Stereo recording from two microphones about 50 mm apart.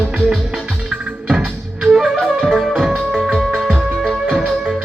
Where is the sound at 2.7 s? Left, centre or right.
Centre.